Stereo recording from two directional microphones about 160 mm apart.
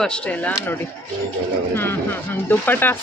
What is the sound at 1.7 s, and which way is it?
Speech, 15° left (ahead or behind).